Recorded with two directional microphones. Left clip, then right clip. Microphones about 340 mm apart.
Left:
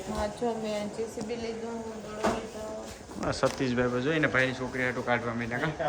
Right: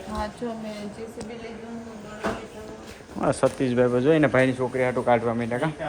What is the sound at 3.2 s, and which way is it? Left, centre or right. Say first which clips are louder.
Speech: right 6 dB; centre.